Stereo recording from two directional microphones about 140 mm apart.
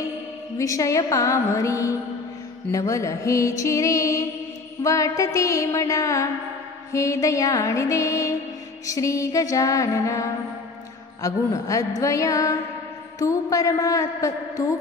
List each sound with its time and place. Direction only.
0.6 s music: 25° left (ahead or behind)